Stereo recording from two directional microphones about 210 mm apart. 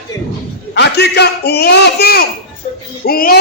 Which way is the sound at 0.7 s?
50° left (ahead or behind).